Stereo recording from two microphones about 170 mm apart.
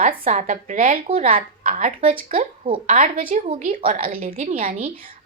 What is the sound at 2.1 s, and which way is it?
Speech, 35° right (ahead or behind).